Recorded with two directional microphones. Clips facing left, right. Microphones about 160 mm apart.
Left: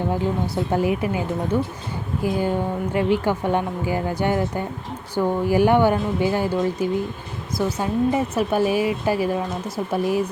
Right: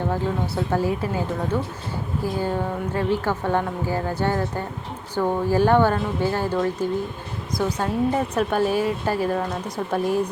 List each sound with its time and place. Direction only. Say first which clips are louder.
0.1 s a woman's voice: left 2 dB; 15° left (ahead or behind)
2.2 s a woman's voice: left 3 dB; 15° left (ahead or behind)